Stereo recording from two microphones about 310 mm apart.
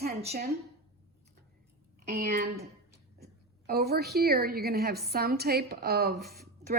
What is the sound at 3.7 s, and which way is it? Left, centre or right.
A woman's voice, right.